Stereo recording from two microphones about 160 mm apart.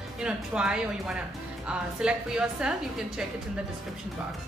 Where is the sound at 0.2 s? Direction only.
5° right (ahead or behind).